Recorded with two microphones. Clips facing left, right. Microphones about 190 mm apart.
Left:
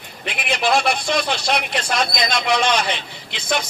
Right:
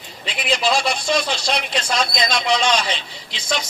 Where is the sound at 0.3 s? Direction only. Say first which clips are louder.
Even; 55° left (ahead or behind).